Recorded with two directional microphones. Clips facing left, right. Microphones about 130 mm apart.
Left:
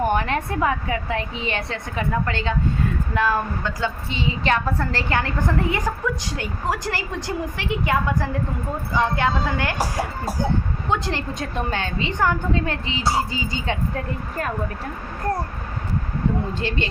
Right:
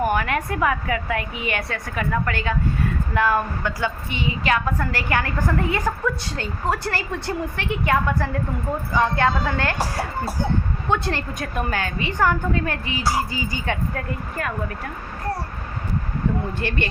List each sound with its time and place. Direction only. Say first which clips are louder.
0.1 s a woman's voice: even; 30° left (ahead or behind)
3.2 s a woman's voice: right 1 dB; 15° right (ahead or behind)
4.4 s a woman's voice: even; 30° left (ahead or behind)
16.6 s a woman's voice: even; 20° left (ahead or behind)